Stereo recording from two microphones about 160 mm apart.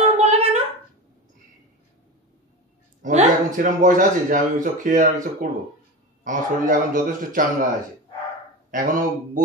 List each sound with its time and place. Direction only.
0.2 s a sound: 40° right (ahead or behind)
3.0 s a man's voice: 50° right (ahead or behind)
8.7 s speech: 55° right (ahead or behind)